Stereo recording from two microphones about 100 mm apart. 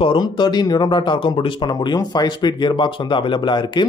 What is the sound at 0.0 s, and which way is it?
Speech, 50° left (ahead or behind).